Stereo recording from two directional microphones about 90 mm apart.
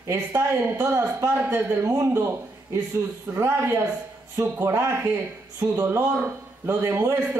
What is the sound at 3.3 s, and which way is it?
A man's voice, 30° right (ahead or behind).